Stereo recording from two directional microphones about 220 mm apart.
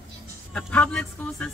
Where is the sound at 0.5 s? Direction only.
5° left (ahead or behind).